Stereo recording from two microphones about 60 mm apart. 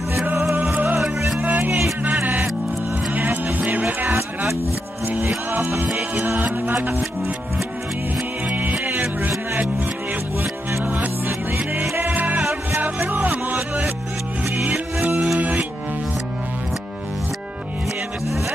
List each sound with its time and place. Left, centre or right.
0.9 s music: centre
1.4 s music: right
5.0 s music: right
5.9 s music: centre
6.2 s music: right
8.5 s music: right
10.8 s music: right
15.1 s music: centre